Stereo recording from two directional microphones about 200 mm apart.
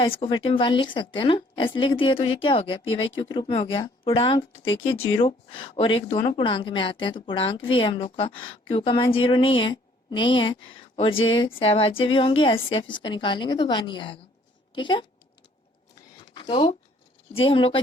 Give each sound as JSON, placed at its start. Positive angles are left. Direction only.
{"t": 0.0, "sound": "a woman's voice", "side_deg": 25}
{"t": 16.3, "sound": "a sound", "side_deg": 25}
{"t": 17.3, "sound": "a woman's voice", "side_deg": 25}